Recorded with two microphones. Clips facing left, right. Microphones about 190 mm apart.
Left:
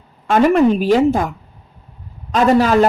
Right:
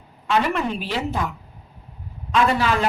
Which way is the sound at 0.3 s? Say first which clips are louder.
Left 10 dB; 45° left (ahead or behind).